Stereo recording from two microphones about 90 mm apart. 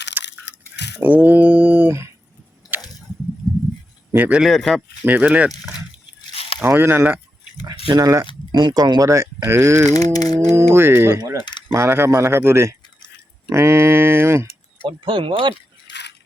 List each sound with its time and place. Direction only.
0.2 s crushing: 20° right (ahead or behind)
1.0 s mantra: 20° right (ahead or behind)
2.6 s a sound: 45° left (ahead or behind)
4.1 s a man's voice: 20° right (ahead or behind)
4.4 s speech: centre (ahead or behind)
5.0 s mantra: 15° right (ahead or behind)
6.3 s a sound: 90° left
6.6 s a man's voice: 25° right (ahead or behind)
7.9 s speech: 40° right (ahead or behind)
8.5 s speech: 50° right (ahead or behind)
9.0 s speech: 35° right (ahead or behind)
9.8 s a sound: 45° left (ahead or behind)
10.5 s a man's voice: 30° right (ahead or behind)
14.8 s speech: 65° right (ahead or behind)